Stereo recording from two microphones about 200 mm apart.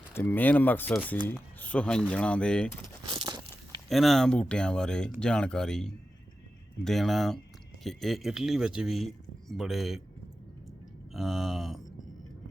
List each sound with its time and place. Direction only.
0.1 s speech: 10° left (ahead or behind)
3.1 s crumpling: 20° right (ahead or behind)
3.8 s speech: centre (ahead or behind)
11.1 s speech: centre (ahead or behind)